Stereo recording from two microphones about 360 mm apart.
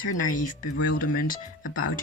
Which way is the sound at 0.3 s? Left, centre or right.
Left.